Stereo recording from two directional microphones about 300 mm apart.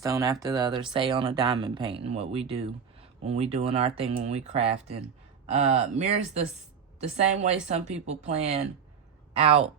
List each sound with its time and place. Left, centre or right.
0.0 s speech: centre